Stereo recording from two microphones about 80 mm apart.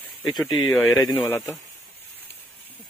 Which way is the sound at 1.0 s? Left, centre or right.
Left.